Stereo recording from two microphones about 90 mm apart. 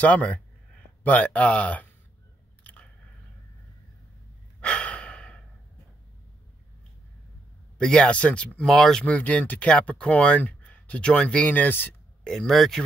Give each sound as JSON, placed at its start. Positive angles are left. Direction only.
{"t": 0.0, "sound": "speech", "side_deg": 15}
{"t": 2.6, "sound": "biting", "side_deg": 15}
{"t": 4.6, "sound": "breathing", "side_deg": 10}
{"t": 7.7, "sound": "speech", "side_deg": 10}
{"t": 9.0, "sound": "speech", "side_deg": 15}
{"t": 12.3, "sound": "speech", "side_deg": 5}